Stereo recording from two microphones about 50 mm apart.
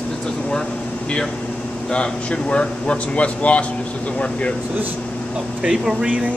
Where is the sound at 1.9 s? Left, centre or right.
Left.